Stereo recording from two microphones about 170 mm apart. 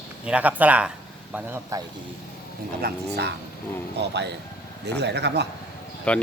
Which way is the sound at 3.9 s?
90° right.